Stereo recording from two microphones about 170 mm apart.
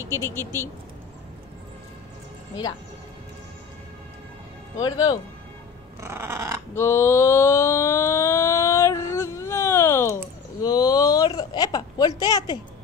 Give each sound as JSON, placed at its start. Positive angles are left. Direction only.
{"t": 0.1, "sound": "speech", "side_deg": 15}
{"t": 4.7, "sound": "speech", "side_deg": 20}
{"t": 5.9, "sound": "dog", "side_deg": -15}
{"t": 6.7, "sound": "a sound", "side_deg": 15}
{"t": 12.2, "sound": "speech", "side_deg": 25}